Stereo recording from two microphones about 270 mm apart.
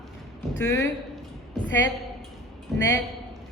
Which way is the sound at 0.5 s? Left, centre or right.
Centre.